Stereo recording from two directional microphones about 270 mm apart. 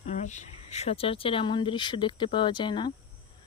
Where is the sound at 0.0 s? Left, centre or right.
Left.